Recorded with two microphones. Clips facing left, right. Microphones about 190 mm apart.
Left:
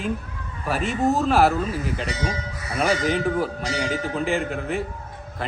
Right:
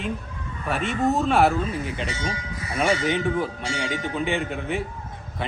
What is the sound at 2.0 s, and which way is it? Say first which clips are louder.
Speech: left 2 dB; 35° left (ahead or behind).